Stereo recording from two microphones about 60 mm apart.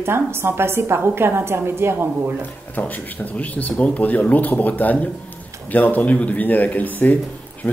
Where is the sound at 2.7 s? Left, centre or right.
Left.